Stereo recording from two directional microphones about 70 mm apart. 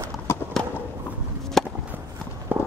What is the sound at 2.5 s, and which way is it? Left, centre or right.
Clip-clop, right.